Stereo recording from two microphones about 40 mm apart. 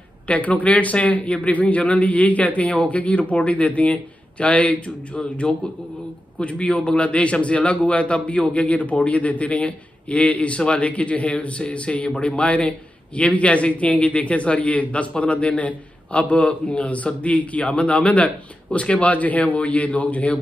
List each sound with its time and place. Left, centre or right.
0.3 s a man's voice: left